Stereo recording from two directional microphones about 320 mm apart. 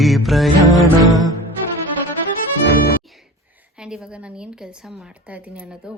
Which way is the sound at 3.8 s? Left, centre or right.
Centre.